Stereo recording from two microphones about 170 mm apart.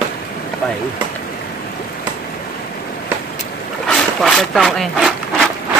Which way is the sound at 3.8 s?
Centre (ahead or behind).